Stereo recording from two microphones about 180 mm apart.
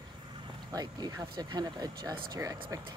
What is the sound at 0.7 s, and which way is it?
Speech, 20° right (ahead or behind).